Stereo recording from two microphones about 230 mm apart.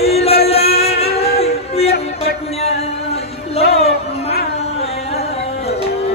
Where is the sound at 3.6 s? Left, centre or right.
Left.